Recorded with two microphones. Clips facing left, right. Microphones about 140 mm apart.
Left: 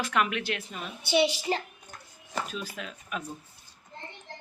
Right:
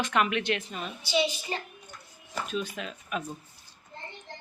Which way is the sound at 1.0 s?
70° left (ahead or behind).